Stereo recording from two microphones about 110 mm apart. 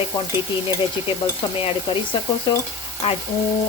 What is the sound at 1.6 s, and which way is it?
Speech, 55° left (ahead or behind).